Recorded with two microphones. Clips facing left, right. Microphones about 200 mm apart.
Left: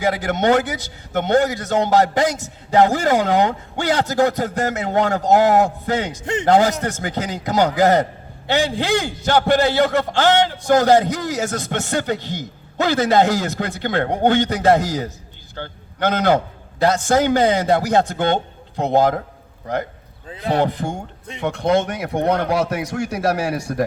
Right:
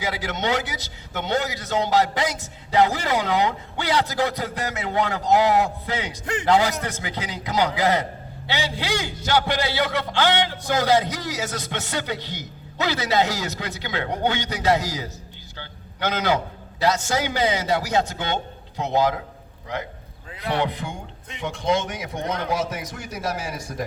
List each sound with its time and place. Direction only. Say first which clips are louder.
0.0 s a man's voice: left 8 dB; 50° left (ahead or behind)
20.2 s a sound: left 5 dB; 30° left (ahead or behind)
20.6 s a man's voice: left 6 dB; 45° left (ahead or behind)
21.4 s speech: left 5 dB; 60° left (ahead or behind)